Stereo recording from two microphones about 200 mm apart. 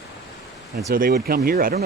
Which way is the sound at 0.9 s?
45° right (ahead or behind).